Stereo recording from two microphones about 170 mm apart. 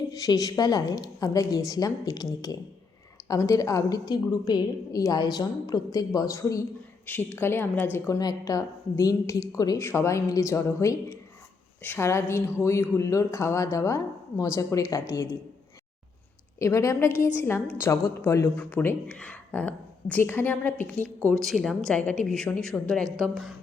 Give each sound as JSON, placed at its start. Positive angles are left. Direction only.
{"t": 0.1, "sound": "a woman's voice", "side_deg": 20}
{"t": 16.6, "sound": "a woman's voice", "side_deg": 15}